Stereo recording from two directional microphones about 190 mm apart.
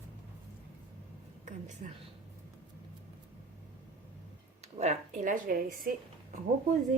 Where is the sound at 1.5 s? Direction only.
40° right (ahead or behind).